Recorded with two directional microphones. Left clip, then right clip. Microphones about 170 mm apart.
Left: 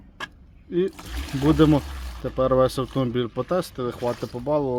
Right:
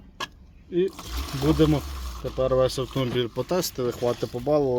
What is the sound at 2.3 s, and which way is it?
Speech, 50° left (ahead or behind).